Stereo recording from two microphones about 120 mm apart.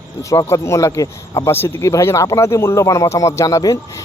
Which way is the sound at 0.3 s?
25° left (ahead or behind).